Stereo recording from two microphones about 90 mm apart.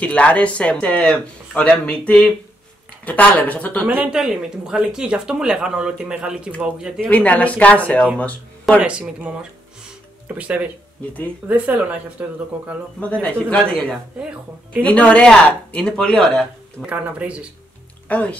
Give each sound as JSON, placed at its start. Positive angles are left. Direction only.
{"t": 0.0, "sound": "speech", "side_deg": 15}
{"t": 3.8, "sound": "speech", "side_deg": -10}
{"t": 7.1, "sound": "speech", "side_deg": 15}
{"t": 8.7, "sound": "speech", "side_deg": -10}
{"t": 13.2, "sound": "speech", "side_deg": 15}
{"t": 14.2, "sound": "speech", "side_deg": -10}
{"t": 14.8, "sound": "speech", "side_deg": 15}
{"t": 16.8, "sound": "speech", "side_deg": -15}
{"t": 18.0, "sound": "speech", "side_deg": 15}